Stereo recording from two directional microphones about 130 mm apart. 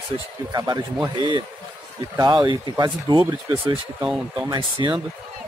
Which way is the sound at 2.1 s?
35° right (ahead or behind).